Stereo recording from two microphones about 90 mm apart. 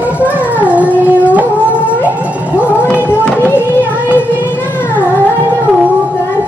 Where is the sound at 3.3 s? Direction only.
25° left (ahead or behind).